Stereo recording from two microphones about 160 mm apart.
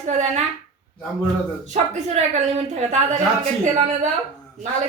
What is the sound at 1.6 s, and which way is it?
Speech, 45° right (ahead or behind).